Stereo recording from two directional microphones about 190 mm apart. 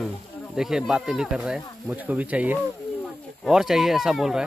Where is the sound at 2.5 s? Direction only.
5° left (ahead or behind).